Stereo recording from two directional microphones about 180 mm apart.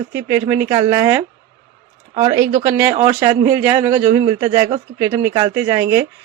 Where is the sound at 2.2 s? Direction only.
20° right (ahead or behind).